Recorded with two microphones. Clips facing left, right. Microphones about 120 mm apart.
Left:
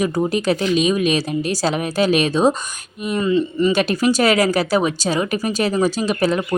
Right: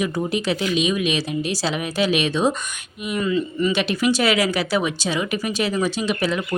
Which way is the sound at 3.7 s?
45° left (ahead or behind).